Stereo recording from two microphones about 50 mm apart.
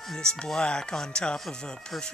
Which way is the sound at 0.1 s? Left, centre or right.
Centre.